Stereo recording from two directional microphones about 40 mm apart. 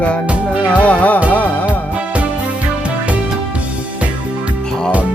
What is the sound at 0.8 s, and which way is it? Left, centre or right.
Music, left.